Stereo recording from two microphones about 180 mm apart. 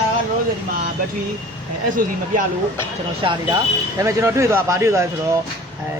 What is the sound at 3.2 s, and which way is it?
Speech, 25° right (ahead or behind).